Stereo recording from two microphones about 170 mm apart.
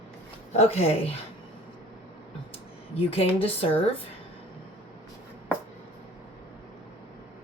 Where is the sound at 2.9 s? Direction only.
35° left (ahead or behind).